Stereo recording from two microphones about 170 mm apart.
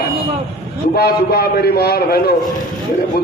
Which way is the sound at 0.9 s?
65° left (ahead or behind).